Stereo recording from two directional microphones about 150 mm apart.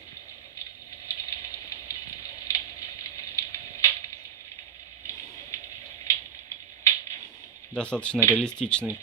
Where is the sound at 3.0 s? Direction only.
20° left (ahead or behind).